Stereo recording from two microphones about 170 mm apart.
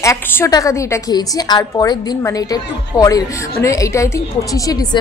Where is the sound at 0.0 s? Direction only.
15° left (ahead or behind).